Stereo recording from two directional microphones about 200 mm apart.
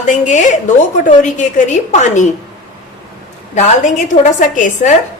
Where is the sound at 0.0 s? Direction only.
40° left (ahead or behind).